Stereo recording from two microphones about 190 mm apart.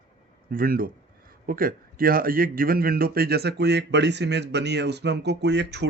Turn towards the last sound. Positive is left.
turn(degrees=-65)  # may be behind; listen again after turning